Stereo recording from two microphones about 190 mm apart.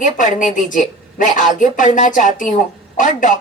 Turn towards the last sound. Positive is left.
turn(degrees=40)  # may be behind; listen again after turning